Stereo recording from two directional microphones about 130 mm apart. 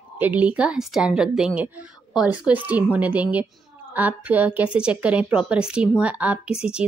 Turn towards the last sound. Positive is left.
turn(degrees=-10)  # may be behind; listen again after turning